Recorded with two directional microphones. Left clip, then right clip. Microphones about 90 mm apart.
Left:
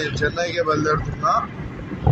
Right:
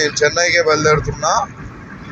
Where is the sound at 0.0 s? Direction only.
10° right (ahead or behind).